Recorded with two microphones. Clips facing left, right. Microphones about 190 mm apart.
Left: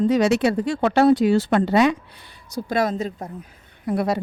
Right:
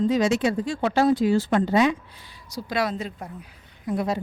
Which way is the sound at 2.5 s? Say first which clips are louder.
Left 4 dB; 50° left (ahead or behind).